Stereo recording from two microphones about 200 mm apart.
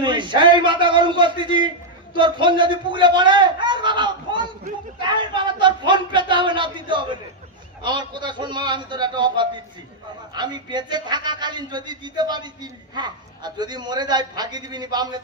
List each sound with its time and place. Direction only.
0.0 s a man's voice: 25° right (ahead or behind)
5.0 s a sound: 25° right (ahead or behind)
7.8 s a man's voice: 20° right (ahead or behind)